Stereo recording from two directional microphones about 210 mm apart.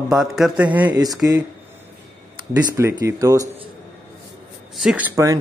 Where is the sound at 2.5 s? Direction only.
15° right (ahead or behind).